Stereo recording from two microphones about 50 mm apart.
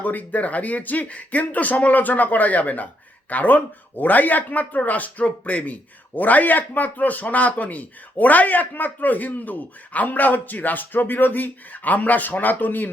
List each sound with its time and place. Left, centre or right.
0.0 s speech: left